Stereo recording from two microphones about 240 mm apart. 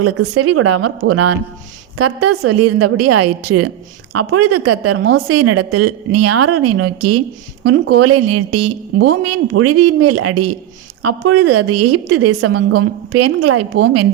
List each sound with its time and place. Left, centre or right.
0.0 s a woman's voice: right